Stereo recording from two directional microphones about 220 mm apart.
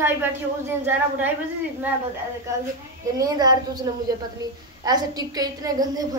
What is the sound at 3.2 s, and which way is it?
A woman's voice, 20° right (ahead or behind).